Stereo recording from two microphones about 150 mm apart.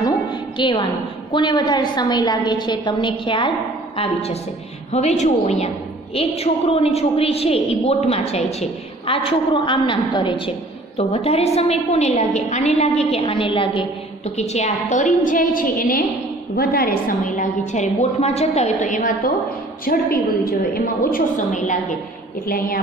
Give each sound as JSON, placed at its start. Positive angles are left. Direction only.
{"t": 0.0, "sound": "a sound", "side_deg": 30}
{"t": 1.3, "sound": "a woman's voice", "side_deg": 30}
{"t": 13.2, "sound": "a woman's voice", "side_deg": 35}
{"t": 18.2, "sound": "a woman's voice", "side_deg": 45}
{"t": 19.8, "sound": "a woman's voice", "side_deg": 75}
{"t": 21.4, "sound": "a woman's voice", "side_deg": 55}